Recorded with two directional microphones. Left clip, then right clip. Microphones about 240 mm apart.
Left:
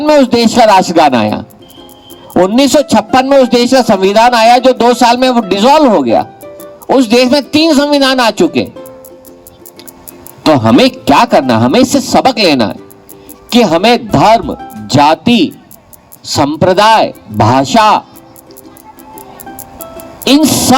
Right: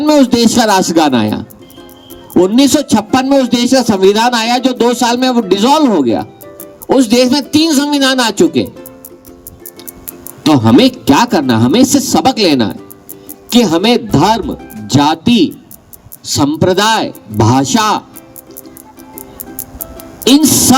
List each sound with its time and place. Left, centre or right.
0.0 s a man's voice: centre
10.4 s a man's voice: centre
19.5 s music: centre